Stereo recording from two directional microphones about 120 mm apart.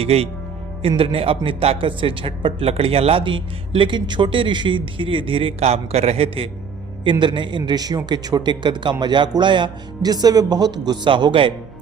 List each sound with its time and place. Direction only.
0.0 s a man's voice: 55° right (ahead or behind)